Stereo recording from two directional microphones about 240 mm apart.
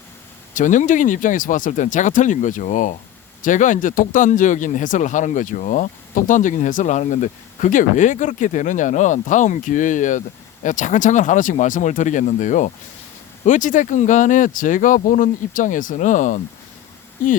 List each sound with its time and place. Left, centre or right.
0.5 s speech: left